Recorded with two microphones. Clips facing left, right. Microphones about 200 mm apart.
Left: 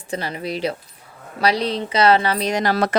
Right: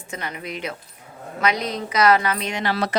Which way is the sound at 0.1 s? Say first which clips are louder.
Left 6 dB; 30° left (ahead or behind).